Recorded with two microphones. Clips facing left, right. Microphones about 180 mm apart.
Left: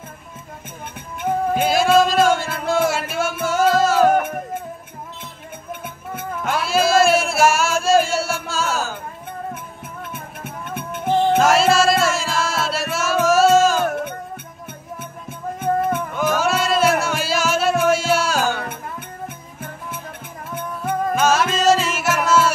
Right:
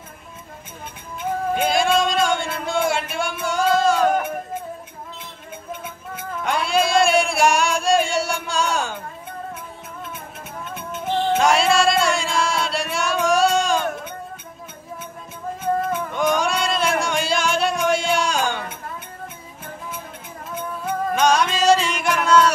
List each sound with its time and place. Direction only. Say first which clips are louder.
1.5 s music: left 3 dB; 5° left (ahead or behind)
6.4 s a sound: left 1 dB; 5° left (ahead or behind)
10.1 s music: left 2 dB; 60° left (ahead or behind)
11.3 s music: left 1 dB; centre (ahead or behind)
15.6 s music: left 2 dB; 55° left (ahead or behind)
16.1 s music: left 1 dB; 5° left (ahead or behind)
21.1 s music: even; 5° left (ahead or behind)